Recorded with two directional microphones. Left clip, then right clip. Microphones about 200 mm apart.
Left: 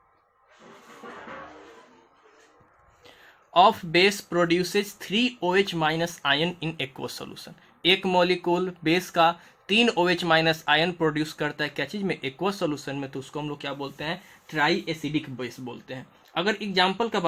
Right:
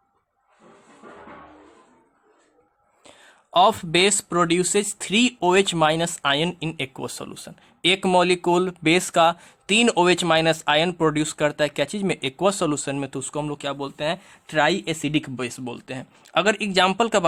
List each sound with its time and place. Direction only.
3.0 s speech: 30° right (ahead or behind); by 17.2 s 55° right (ahead or behind)